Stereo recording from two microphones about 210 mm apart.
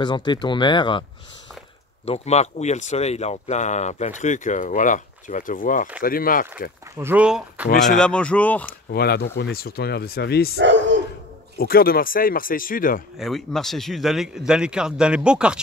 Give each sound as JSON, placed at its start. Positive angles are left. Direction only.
{"t": 0.0, "sound": "speech", "side_deg": 20}
{"t": 2.0, "sound": "speech", "side_deg": 30}
{"t": 7.0, "sound": "a man's voice", "side_deg": -10}
{"t": 8.9, "sound": "speech", "side_deg": 50}
{"t": 10.6, "sound": "speech", "side_deg": -60}
{"t": 11.5, "sound": "speech", "side_deg": 45}
{"t": 13.2, "sound": "a man's voice", "side_deg": 0}